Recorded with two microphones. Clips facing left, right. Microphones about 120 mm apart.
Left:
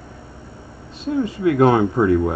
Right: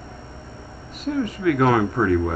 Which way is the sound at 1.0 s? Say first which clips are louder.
Left 2 dB; 25° left (ahead or behind).